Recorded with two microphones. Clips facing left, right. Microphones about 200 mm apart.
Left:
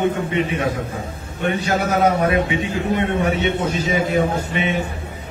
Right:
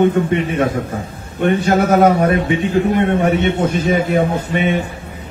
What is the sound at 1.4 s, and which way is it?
A man's voice, 55° right (ahead or behind).